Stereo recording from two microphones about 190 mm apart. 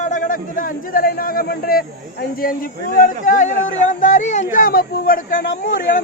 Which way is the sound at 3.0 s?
45° left (ahead or behind).